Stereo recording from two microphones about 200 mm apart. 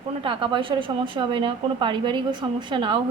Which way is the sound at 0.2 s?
25° right (ahead or behind).